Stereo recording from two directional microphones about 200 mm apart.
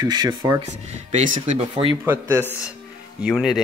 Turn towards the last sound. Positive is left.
turn(degrees=0)  # may be behind; listen again after turning